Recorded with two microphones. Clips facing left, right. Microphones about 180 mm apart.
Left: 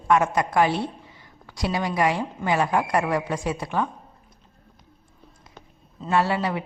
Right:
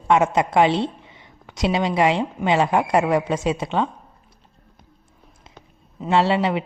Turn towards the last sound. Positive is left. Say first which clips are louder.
# right 4 dB
turn(degrees=-25)  # may be behind; listen again after turning